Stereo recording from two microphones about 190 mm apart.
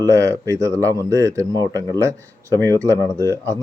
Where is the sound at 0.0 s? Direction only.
15° right (ahead or behind).